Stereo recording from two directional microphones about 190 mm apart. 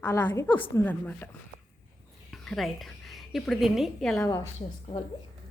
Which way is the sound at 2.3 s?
Centre (ahead or behind).